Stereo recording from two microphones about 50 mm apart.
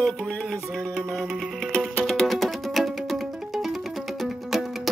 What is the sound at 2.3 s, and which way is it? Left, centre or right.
Music, centre.